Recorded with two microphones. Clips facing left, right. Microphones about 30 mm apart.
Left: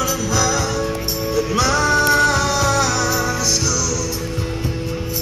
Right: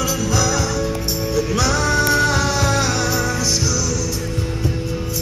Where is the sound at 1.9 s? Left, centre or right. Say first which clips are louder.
Left 2 dB; centre.